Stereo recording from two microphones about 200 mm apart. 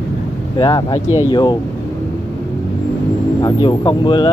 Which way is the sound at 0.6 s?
20° left (ahead or behind).